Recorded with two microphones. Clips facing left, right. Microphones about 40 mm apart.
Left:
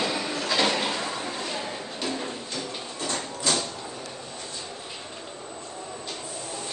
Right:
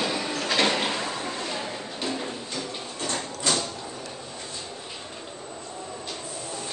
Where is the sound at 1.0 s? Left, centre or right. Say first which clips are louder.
Even; centre.